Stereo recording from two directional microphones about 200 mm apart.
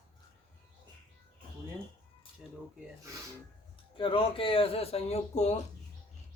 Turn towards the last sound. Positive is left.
turn(degrees=35)  # may be behind; listen again after turning